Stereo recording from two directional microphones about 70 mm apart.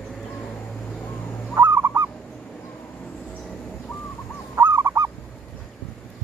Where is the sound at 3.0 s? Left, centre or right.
Centre.